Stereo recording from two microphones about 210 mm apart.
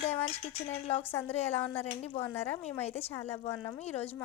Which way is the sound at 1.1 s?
10° left (ahead or behind).